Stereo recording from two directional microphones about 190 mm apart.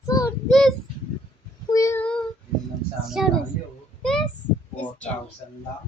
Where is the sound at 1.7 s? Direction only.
15° left (ahead or behind).